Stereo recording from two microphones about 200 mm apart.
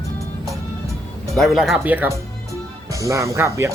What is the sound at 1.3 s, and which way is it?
Speech, centre (ahead or behind).